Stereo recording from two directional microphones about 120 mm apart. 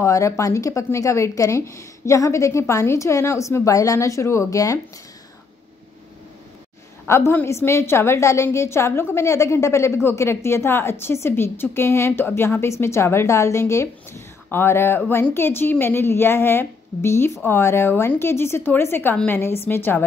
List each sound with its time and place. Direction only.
0.0 s a woman's voice: 25° left (ahead or behind)
7.1 s a woman's voice: 20° left (ahead or behind)